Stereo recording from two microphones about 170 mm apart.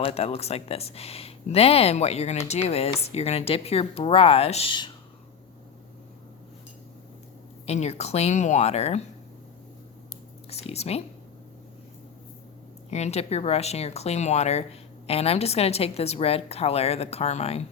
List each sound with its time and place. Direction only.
0.0 s speech: 35° left (ahead or behind)
7.7 s speech: 40° left (ahead or behind)
10.5 s speech: 40° left (ahead or behind)
12.9 s speech: 40° left (ahead or behind)